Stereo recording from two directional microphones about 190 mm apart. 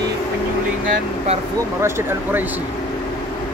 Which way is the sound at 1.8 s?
10° right (ahead or behind).